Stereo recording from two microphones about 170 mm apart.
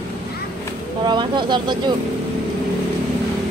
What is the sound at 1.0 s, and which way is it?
Speech, 25° right (ahead or behind).